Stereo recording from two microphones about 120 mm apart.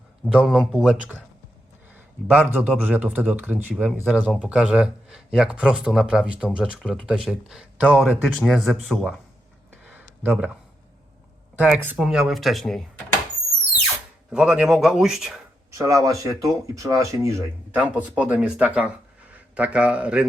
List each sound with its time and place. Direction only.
0.4 s a man's voice: centre (ahead or behind)
2.3 s a man's voice: 15° right (ahead or behind)
8.2 s speech: centre (ahead or behind)
9.8 s a sound: 15° right (ahead or behind)
11.5 s a man's voice: 15° right (ahead or behind)
11.9 s speech: 5° right (ahead or behind)
14.3 s speech: 5° right (ahead or behind)
15.7 s speech: 25° right (ahead or behind)
17.7 s a man's voice: 10° right (ahead or behind)